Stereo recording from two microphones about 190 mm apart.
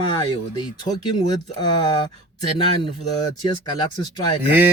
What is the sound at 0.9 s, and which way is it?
Speech, 35° left (ahead or behind).